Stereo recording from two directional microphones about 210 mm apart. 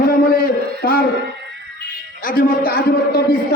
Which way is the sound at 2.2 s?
40° left (ahead or behind).